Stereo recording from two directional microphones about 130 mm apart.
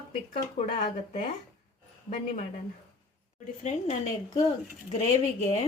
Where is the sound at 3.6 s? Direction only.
60° left (ahead or behind).